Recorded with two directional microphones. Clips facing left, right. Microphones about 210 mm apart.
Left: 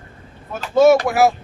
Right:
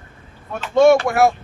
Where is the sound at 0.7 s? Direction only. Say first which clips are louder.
Even; 5° left (ahead or behind).